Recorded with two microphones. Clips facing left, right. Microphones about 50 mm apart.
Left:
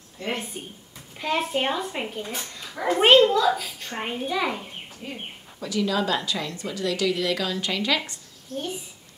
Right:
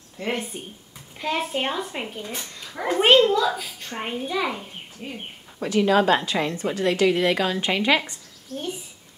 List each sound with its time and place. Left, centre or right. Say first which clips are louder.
0.2 s a woman's voice: right 2 dB; right
1.1 s a child's voice: left 1 dB; centre
2.7 s a child's voice: left 1 dB; centre
3.0 s a child's voice: even; centre
5.0 s speech: right 2 dB; right
5.6 s a woman's voice: right 6 dB; right